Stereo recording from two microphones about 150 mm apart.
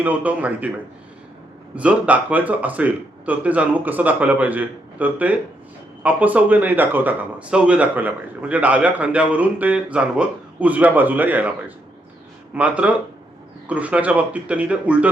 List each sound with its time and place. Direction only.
0.0 s a man's voice: 10° right (ahead or behind)
1.7 s a man's voice: 10° right (ahead or behind)
12.5 s a man's voice: 10° right (ahead or behind)